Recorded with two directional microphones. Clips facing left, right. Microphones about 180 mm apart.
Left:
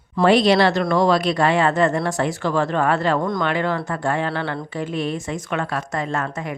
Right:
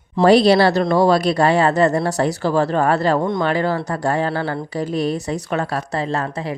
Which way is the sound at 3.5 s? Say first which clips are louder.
Right 3 dB; 35° right (ahead or behind).